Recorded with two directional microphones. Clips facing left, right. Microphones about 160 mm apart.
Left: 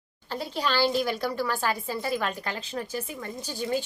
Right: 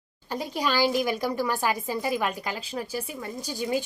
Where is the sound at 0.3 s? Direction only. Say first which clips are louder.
Right 1 dB; 15° right (ahead or behind).